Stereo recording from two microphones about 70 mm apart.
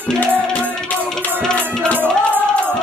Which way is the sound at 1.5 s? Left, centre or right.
Centre.